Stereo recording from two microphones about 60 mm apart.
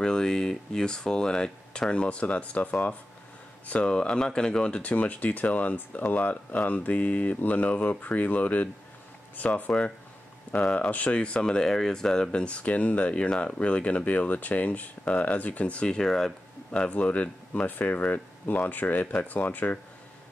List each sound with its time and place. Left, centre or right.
0.0 s speech: centre
16.7 s speech: centre